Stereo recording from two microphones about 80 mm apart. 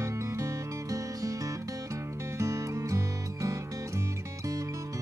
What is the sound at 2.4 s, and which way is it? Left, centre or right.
Music, right.